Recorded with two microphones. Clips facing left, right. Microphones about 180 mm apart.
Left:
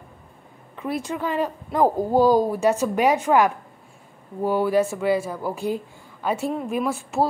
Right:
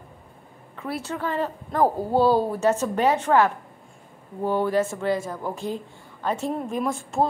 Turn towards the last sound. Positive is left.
turn(degrees=5)  # may be behind; listen again after turning